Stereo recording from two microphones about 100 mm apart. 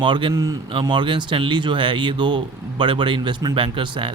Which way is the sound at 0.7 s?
55° right (ahead or behind).